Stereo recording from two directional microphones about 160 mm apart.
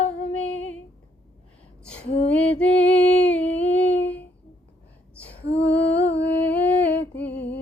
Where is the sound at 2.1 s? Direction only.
40° left (ahead or behind).